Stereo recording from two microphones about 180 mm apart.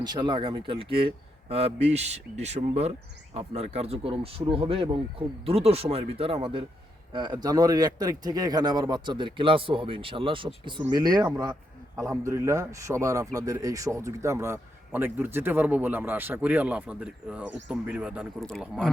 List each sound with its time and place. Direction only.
0.0 s a man's voice: 25° right (ahead or behind); by 18.9 s 5° left (ahead or behind)